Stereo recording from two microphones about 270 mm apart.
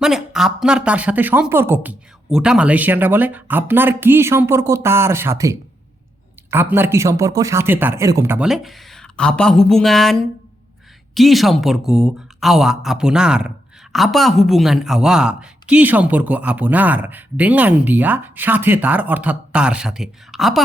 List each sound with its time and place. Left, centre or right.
0.0 s a woman's voice: centre